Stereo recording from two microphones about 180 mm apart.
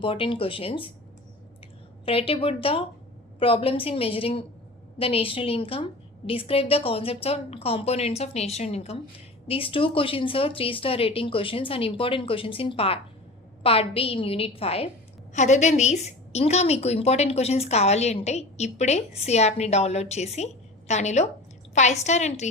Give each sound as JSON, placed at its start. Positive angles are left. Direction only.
{"t": 0.0, "sound": "speech", "side_deg": 30}
{"t": 2.0, "sound": "a woman's voice", "side_deg": 30}